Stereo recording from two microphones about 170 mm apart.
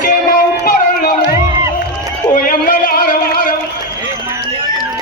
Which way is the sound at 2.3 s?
55° left (ahead or behind).